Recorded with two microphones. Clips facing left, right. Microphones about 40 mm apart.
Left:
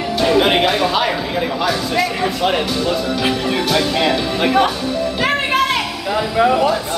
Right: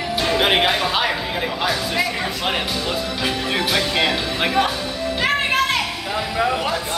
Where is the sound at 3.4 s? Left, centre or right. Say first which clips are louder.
Left 4 dB; centre.